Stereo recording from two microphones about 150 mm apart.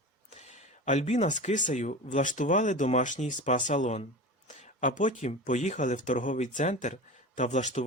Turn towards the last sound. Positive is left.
turn(degrees=50)  # may be behind; listen again after turning